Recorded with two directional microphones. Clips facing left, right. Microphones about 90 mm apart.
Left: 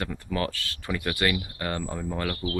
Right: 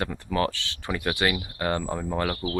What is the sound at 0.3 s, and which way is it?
Speech, 20° right (ahead or behind).